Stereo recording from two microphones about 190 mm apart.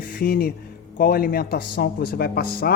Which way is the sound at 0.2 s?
50° left (ahead or behind).